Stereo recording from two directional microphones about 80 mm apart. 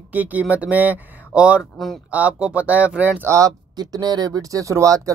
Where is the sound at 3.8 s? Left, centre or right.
Right.